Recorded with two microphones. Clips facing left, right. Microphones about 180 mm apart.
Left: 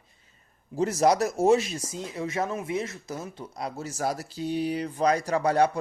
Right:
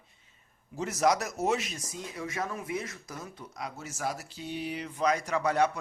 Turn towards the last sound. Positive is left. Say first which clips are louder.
# left 4 dB
turn(degrees=35)  # may be behind; listen again after turning